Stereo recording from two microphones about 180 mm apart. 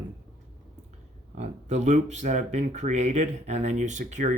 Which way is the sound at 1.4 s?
40° right (ahead or behind).